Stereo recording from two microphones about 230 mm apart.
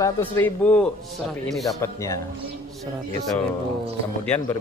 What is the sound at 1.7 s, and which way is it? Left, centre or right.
Speech, centre.